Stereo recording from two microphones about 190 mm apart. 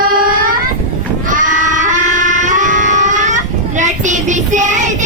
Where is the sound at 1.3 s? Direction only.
40° right (ahead or behind).